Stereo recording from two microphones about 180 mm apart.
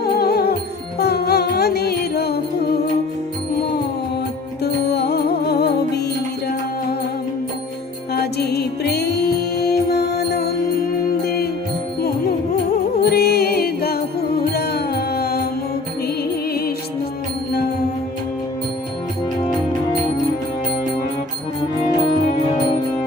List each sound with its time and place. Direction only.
0.0 s music: 60° left (ahead or behind)
4.6 s music: 65° left (ahead or behind)
8.1 s music: 65° left (ahead or behind)
13.0 s music: 60° left (ahead or behind)